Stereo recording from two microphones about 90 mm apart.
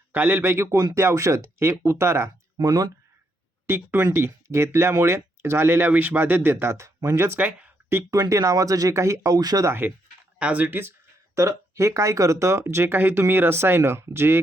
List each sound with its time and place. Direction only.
0.1 s speech: 20° right (ahead or behind)
2.6 s speech: 45° right (ahead or behind)
3.7 s speech: 25° right (ahead or behind); by 9.6 s 45° right (ahead or behind)
9.6 s speech: 25° right (ahead or behind)
11.3 s speech: 35° right (ahead or behind)